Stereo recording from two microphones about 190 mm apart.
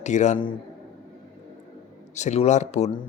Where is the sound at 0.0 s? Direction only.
40° left (ahead or behind).